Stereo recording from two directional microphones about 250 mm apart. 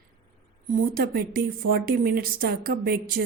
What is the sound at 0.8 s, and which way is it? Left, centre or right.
A woman's voice, right.